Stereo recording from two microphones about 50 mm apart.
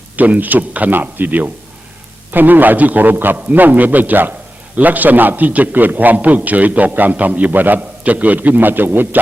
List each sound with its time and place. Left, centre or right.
0.2 s a man's voice: right